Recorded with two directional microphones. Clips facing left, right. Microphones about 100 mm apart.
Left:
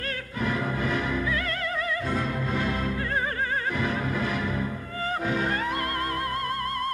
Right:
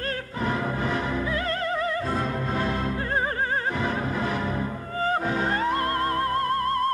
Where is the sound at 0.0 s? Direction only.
35° right (ahead or behind).